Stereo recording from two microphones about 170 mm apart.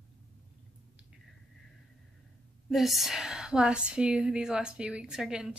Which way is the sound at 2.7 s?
Centre (ahead or behind).